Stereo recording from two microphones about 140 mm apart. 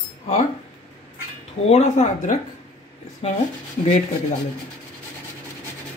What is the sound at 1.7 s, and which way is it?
Speech, 55° left (ahead or behind).